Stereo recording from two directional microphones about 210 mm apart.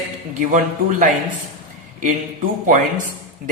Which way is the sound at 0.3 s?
40° right (ahead or behind).